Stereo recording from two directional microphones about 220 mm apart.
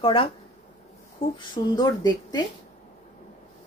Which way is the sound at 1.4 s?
15° left (ahead or behind).